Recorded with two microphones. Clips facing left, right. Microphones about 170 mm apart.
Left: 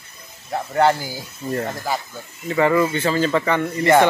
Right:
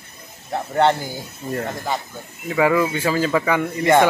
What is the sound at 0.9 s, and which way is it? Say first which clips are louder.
Speech: even; 5° left (ahead or behind).